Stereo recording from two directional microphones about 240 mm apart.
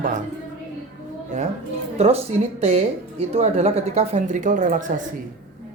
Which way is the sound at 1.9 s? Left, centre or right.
Right.